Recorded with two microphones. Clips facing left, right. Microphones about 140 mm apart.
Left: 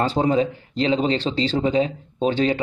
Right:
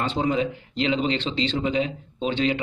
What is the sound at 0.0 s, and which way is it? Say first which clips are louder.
Speech: left 4 dB; 40° left (ahead or behind).